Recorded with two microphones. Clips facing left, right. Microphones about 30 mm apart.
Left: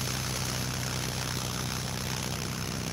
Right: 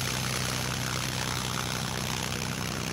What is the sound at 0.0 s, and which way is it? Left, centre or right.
Vehicle, right.